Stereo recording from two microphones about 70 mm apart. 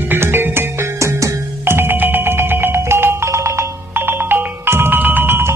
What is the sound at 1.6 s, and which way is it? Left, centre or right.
Music, right.